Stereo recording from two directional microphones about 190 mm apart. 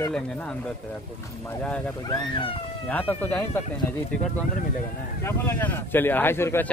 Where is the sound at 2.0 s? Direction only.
25° left (ahead or behind).